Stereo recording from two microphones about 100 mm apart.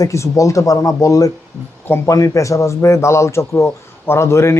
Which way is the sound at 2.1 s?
35° left (ahead or behind).